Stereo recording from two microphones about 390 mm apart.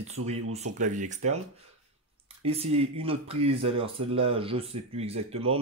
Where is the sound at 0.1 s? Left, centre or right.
Centre.